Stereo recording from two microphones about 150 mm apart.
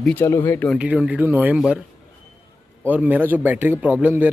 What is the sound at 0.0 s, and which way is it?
Speech, 15° left (ahead or behind).